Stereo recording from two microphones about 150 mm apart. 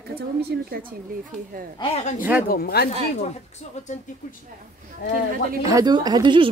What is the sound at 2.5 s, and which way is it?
Speech, 90° left.